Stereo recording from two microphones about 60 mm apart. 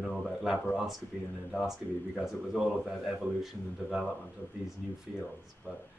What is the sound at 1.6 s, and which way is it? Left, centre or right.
Speech, centre.